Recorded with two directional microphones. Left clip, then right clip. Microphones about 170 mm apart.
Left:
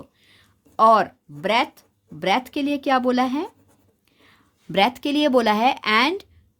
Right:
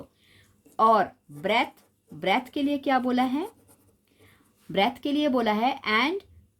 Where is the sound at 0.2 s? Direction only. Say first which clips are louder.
Left 4 dB; 35° left (ahead or behind).